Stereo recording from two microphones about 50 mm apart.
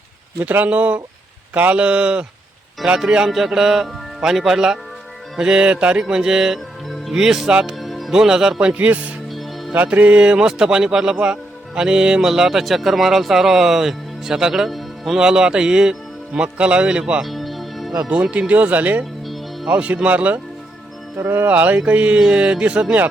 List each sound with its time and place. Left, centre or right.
0.5 s speech: right; by 3.2 s centre
3.2 s speech: centre
7.8 s music: centre
8.1 s speech: centre
8.6 s speech: right
9.3 s music: centre
9.7 s speech: right; by 15.2 s centre
15.2 s speech: centre
17.2 s music: centre
18.1 s speech: right
21.2 s speech: right
21.4 s speech: right